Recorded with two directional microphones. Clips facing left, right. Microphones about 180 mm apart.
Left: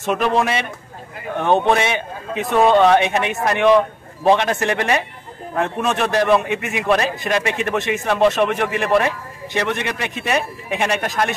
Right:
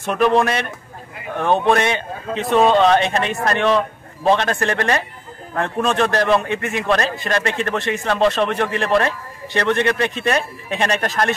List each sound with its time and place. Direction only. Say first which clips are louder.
0.0 s a man's voice: right 2 dB; 20° left (ahead or behind)
0.4 s a man's voice: right 1 dB; 5° left (ahead or behind)
1.3 s a man's voice: even; 20° left (ahead or behind)